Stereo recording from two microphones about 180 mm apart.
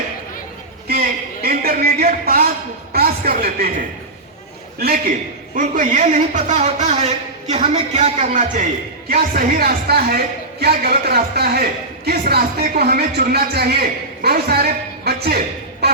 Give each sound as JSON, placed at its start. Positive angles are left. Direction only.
{"t": 0.9, "sound": "a sound", "side_deg": -60}
{"t": 2.9, "sound": "a man's voice", "side_deg": -60}
{"t": 5.5, "sound": "a man's voice", "side_deg": -45}